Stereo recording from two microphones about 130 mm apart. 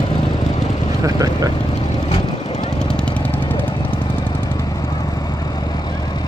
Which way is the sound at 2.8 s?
10° left (ahead or behind).